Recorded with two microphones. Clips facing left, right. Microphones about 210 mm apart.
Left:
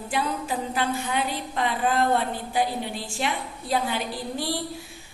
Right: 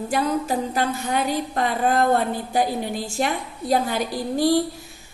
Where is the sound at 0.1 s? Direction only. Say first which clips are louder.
Right 5 dB; 40° right (ahead or behind).